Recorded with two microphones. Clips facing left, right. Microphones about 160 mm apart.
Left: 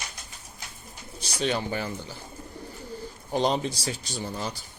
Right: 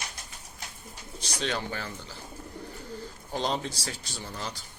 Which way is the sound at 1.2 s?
10° left (ahead or behind).